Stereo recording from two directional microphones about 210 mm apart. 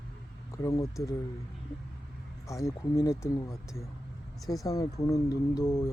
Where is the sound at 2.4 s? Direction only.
15° left (ahead or behind).